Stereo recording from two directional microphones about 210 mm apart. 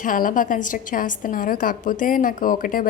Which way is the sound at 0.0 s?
40° left (ahead or behind).